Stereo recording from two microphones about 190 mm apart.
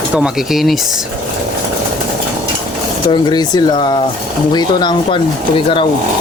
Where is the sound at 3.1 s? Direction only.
25° left (ahead or behind).